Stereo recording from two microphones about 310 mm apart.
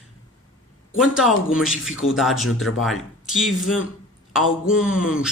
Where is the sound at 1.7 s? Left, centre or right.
Left.